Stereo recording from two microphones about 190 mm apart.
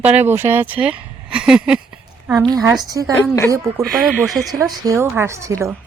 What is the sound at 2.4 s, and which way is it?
Speech, 20° right (ahead or behind).